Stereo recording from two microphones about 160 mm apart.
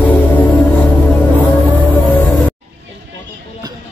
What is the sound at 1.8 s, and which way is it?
Music, 30° left (ahead or behind).